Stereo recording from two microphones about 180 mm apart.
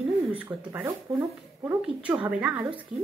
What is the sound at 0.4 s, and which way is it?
Speech, 10° right (ahead or behind).